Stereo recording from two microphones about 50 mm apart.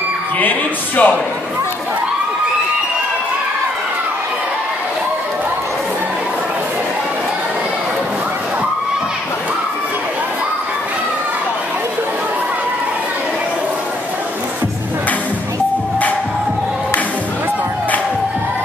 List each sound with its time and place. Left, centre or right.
0.4 s speech: left